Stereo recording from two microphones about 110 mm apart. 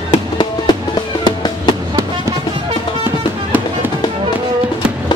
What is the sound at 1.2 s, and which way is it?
Music, 45° left (ahead or behind).